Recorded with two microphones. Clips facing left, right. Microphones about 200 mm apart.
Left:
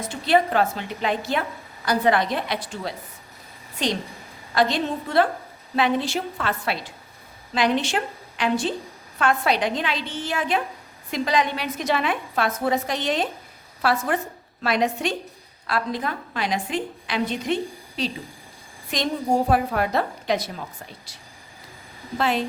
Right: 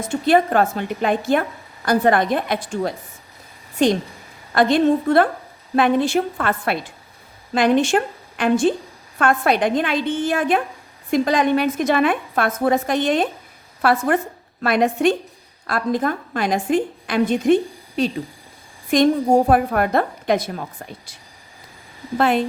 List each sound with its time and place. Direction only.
0.0 s a woman's voice: 50° right (ahead or behind)
22.2 s a woman's voice: 55° right (ahead or behind)